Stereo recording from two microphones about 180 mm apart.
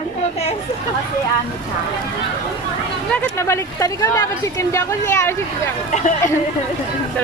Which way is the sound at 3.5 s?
15° left (ahead or behind).